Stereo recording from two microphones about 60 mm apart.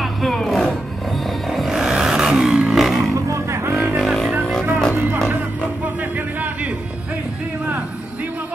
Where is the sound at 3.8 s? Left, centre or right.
Centre.